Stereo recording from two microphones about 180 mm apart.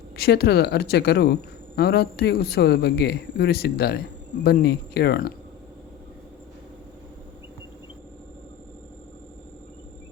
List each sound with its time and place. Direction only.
0.2 s speech: 60° left (ahead or behind)